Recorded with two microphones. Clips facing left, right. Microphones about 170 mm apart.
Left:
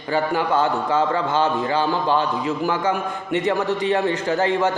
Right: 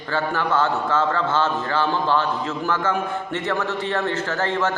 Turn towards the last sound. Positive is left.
turn(degrees=15)  # may be behind; listen again after turning